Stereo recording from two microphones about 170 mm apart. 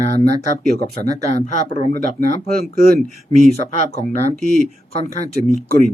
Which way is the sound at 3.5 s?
40° left (ahead or behind).